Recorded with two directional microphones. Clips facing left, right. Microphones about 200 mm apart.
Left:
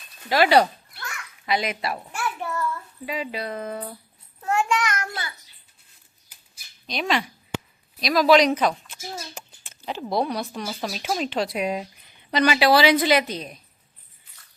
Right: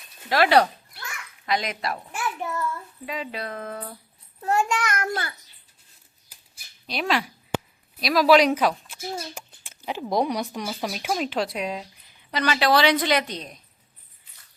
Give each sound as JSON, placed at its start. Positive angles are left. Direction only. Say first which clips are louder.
{"t": 0.3, "sound": "a woman's voice", "louder": "left 1 dB", "side_deg": 0}
{"t": 2.1, "sound": "child singing", "louder": "even", "side_deg": -20}
{"t": 3.1, "sound": "a woman's voice", "louder": "left 2 dB", "side_deg": 0}
{"t": 4.4, "sound": "a child's voice", "louder": "even", "side_deg": -40}
{"t": 4.8, "sound": "a child's voice", "louder": "right 2 dB", "side_deg": -50}
{"t": 6.8, "sound": "a woman's voice", "louder": "even", "side_deg": -5}